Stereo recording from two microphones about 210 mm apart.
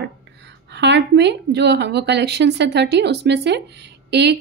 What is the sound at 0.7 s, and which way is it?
A woman's voice, 55° right (ahead or behind).